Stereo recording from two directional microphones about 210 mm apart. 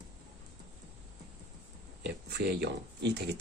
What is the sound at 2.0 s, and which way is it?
Speech, 55° right (ahead or behind).